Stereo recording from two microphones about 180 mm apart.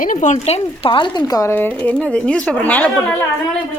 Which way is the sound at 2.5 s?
10° left (ahead or behind).